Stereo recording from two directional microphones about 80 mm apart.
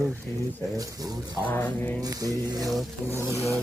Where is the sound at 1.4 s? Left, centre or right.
Left.